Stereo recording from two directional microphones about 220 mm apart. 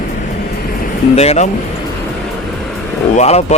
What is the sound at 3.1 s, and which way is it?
Speech, 30° left (ahead or behind).